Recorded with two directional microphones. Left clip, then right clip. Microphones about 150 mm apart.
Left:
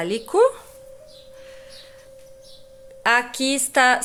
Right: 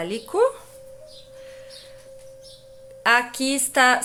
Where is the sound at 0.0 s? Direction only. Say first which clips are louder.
Left 3 dB; 30° left (ahead or behind).